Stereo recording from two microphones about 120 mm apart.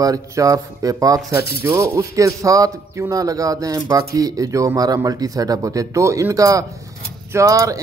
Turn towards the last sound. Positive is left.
turn(degrees=-30)  # may be behind; listen again after turning